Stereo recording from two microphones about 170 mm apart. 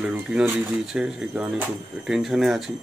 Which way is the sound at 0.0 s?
5° right (ahead or behind).